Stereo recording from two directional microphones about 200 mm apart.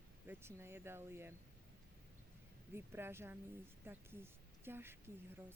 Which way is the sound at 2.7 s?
10° right (ahead or behind).